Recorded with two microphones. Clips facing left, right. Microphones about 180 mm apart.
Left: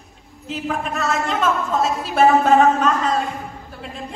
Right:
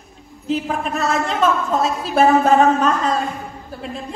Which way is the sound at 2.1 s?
40° right (ahead or behind).